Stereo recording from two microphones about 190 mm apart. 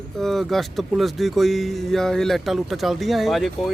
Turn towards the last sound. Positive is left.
turn(degrees=0)  # may be behind; listen again after turning